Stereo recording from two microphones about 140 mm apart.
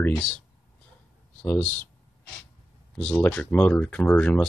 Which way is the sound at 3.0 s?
10° left (ahead or behind).